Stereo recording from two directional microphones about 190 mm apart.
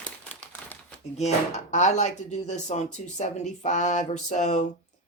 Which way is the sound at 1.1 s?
35° left (ahead or behind).